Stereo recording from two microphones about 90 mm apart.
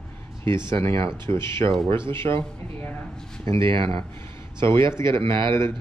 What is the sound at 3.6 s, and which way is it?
Speech, 70° right (ahead or behind).